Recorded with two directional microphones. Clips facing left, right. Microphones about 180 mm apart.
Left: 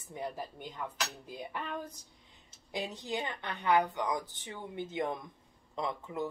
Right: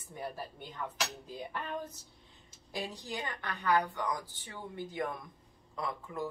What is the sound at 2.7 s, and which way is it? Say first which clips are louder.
Speech: left 3 dB; 20° left (ahead or behind).